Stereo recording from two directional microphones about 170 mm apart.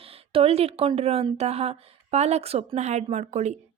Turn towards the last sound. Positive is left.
turn(degrees=-40)  # may be behind; listen again after turning